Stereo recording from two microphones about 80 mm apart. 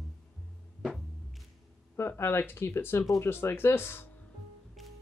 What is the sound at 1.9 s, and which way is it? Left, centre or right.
Speech, left.